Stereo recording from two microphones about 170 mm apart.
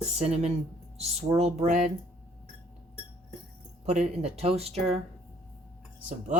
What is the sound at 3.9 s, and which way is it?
Speech, 40° right (ahead or behind).